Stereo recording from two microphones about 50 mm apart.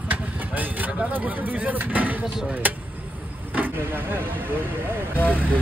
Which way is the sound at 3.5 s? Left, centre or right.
Right.